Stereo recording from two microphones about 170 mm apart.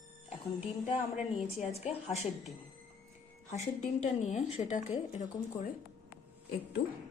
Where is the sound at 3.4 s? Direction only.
40° left (ahead or behind).